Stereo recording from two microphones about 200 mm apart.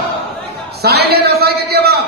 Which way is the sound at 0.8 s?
50° right (ahead or behind).